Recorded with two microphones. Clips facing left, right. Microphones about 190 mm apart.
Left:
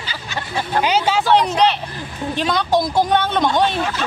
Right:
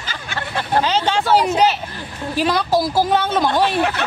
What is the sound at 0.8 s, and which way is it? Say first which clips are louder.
Speech: left 5 dB; 10° left (ahead or behind).